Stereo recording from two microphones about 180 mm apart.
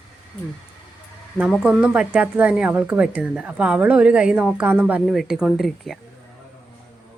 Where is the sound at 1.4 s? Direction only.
5° right (ahead or behind).